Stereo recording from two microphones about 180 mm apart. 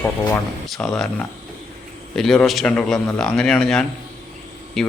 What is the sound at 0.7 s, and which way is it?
Speech, 5° left (ahead or behind).